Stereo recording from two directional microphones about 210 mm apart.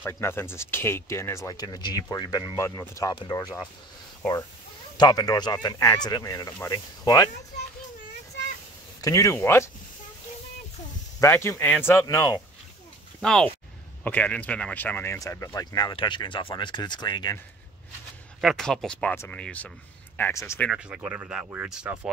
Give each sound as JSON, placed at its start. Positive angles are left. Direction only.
{"t": 0.0, "sound": "speech", "side_deg": 10}
{"t": 4.9, "sound": "speech", "side_deg": 20}
{"t": 9.0, "sound": "speech", "side_deg": 15}
{"t": 11.1, "sound": "speech", "side_deg": 15}
{"t": 13.2, "sound": "speech", "side_deg": 5}
{"t": 18.4, "sound": "speech", "side_deg": 0}
{"t": 20.7, "sound": "speech", "side_deg": -10}